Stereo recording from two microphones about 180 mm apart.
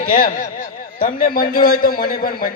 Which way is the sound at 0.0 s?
50° left (ahead or behind).